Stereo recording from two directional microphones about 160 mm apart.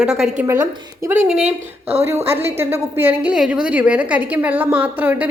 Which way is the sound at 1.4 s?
40° right (ahead or behind).